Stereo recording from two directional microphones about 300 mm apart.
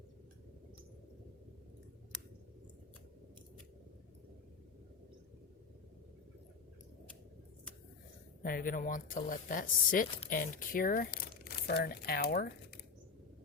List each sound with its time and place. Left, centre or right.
8.4 s speech: left